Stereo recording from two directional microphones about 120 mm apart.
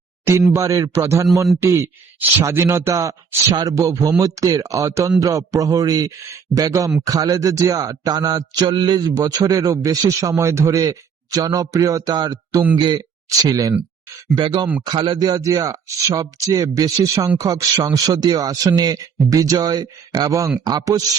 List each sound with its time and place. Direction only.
0.3 s a man's voice: 25° right (ahead or behind); by 13.0 s 40° right (ahead or behind)
13.4 s a man's voice: 30° right (ahead or behind)
14.3 s a man's voice: 40° right (ahead or behind)